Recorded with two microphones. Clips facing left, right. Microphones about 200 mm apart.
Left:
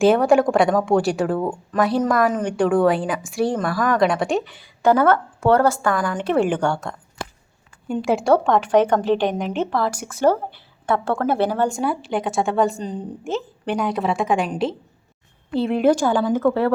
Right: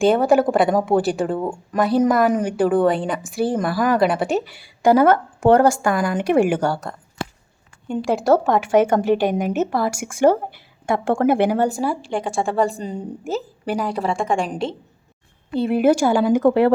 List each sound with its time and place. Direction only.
0.0 s a woman's voice: centre (ahead or behind); by 16.7 s 15° right (ahead or behind)